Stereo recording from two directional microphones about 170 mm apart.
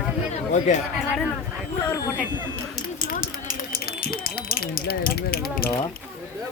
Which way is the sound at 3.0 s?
55° left (ahead or behind).